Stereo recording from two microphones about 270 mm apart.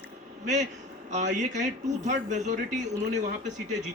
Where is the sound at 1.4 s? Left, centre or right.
Right.